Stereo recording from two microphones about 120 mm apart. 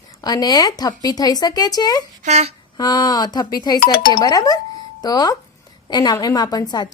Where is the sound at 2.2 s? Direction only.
65° right (ahead or behind).